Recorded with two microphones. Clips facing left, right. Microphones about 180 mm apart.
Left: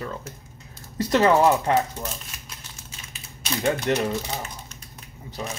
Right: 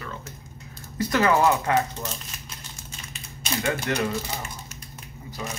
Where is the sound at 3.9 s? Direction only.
20° left (ahead or behind).